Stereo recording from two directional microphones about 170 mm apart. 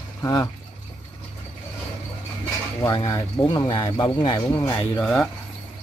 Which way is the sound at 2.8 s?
20° left (ahead or behind).